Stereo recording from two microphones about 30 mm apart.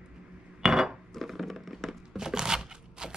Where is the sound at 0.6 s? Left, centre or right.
Centre.